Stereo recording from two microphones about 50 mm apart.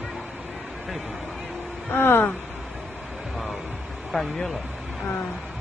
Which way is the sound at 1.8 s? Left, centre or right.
Left.